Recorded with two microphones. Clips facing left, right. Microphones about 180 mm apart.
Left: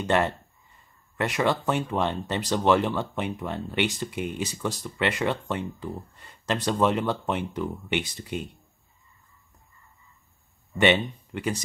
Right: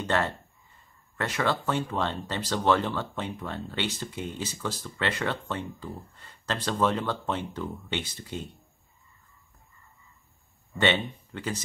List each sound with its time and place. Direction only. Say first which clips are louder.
0.0 s speech: left 4 dB; 15° left (ahead or behind)
10.8 s speech: left 4 dB; 15° left (ahead or behind)